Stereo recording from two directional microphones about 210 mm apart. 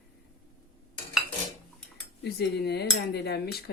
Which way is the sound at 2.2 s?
50° left (ahead or behind).